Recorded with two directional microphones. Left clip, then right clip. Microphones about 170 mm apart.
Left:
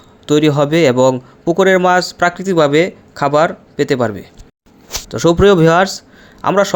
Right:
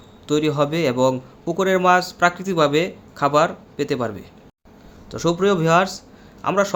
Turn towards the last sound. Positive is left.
turn(degrees=45)  # may be behind; listen again after turning